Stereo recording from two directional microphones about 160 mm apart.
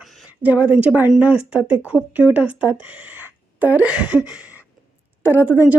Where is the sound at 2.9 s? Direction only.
10° right (ahead or behind).